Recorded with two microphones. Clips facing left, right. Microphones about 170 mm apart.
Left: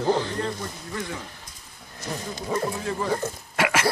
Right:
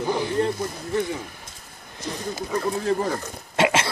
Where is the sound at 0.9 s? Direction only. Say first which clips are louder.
Right 9 dB; 25° right (ahead or behind).